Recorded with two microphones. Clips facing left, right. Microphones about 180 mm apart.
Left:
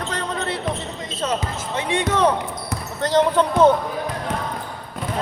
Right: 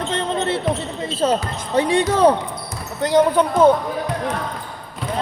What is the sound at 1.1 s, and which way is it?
Speech, 30° right (ahead or behind).